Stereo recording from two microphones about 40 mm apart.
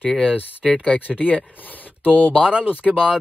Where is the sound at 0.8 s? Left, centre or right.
Left.